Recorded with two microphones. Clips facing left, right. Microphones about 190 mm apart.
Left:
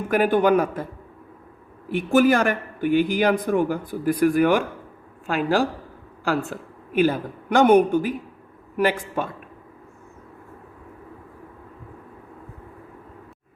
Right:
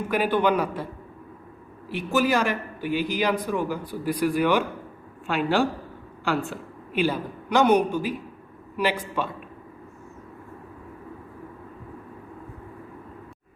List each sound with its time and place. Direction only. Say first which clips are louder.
0.1 s a man's voice: left 5 dB; 45° left (ahead or behind)
1.9 s a man's voice: left 5 dB; 50° left (ahead or behind)